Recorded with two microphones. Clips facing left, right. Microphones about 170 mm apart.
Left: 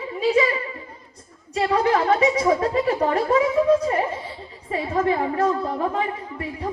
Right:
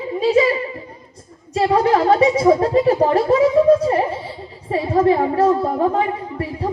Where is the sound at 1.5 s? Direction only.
30° right (ahead or behind).